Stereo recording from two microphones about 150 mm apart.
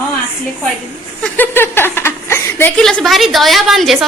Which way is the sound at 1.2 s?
15° left (ahead or behind).